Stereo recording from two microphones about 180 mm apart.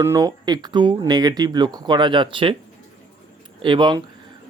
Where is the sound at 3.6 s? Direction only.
25° right (ahead or behind).